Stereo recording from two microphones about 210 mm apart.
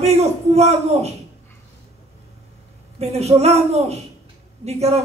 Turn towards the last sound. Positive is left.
turn(degrees=-30)  # may be behind; listen again after turning